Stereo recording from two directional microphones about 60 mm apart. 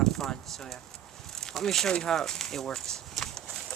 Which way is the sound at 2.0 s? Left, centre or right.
Centre.